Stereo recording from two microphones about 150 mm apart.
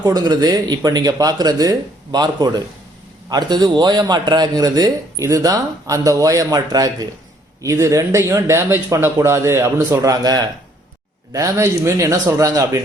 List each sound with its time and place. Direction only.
0.0 s a man's voice: 25° right (ahead or behind)